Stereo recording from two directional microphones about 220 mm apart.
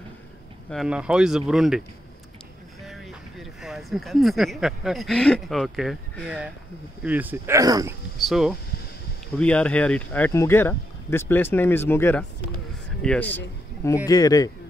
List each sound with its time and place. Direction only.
0.7 s speech: centre (ahead or behind)
2.8 s speech: centre (ahead or behind)
8.2 s speech: centre (ahead or behind)
14.0 s speech: 15° left (ahead or behind)